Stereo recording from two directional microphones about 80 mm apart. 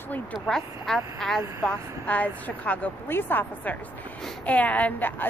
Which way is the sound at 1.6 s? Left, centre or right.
Centre.